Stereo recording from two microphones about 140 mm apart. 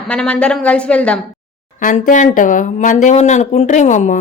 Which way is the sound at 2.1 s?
65° left (ahead or behind).